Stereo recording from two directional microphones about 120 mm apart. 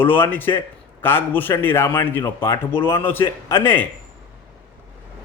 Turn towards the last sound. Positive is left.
turn(degrees=15)  # may be behind; listen again after turning